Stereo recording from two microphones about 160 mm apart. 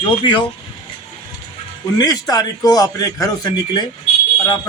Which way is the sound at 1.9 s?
25° left (ahead or behind).